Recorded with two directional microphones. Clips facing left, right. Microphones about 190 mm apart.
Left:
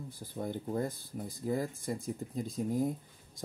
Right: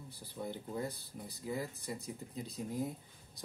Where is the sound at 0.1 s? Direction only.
50° left (ahead or behind).